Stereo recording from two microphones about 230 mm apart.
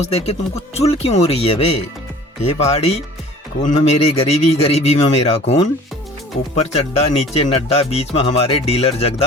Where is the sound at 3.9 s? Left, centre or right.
Left.